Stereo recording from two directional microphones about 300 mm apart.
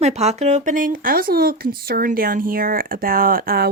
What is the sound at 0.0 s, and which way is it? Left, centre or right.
Speech, right.